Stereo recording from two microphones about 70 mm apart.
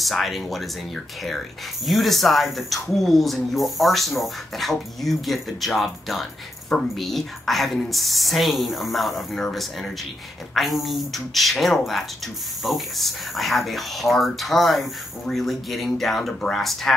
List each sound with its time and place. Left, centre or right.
0.0 s speech: centre